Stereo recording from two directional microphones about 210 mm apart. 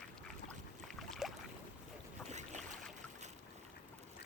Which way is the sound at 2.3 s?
35° right (ahead or behind).